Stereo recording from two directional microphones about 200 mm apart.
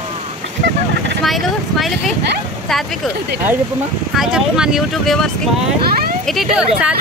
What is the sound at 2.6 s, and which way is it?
Speech, centre (ahead or behind).